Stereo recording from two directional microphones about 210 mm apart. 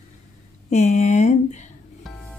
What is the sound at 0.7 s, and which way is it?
Speech, 30° left (ahead or behind).